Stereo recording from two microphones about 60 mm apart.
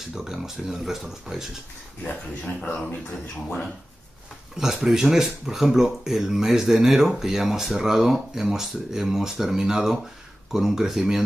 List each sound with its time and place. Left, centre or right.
0.0 s speech: centre
2.6 s a man's voice: centre
4.6 s speech: centre